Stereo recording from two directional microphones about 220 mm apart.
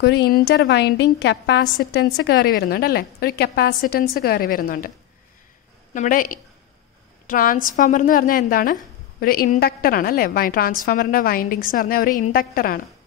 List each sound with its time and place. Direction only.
0.0 s a woman's voice: 50° left (ahead or behind)
5.9 s a woman's voice: 40° left (ahead or behind)